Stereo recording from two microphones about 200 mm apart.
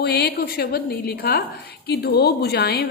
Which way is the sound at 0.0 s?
55° left (ahead or behind).